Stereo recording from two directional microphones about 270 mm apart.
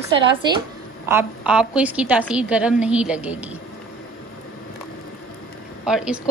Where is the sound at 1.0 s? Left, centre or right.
Centre.